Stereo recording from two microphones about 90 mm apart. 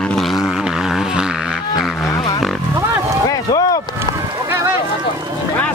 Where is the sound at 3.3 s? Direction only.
40° left (ahead or behind).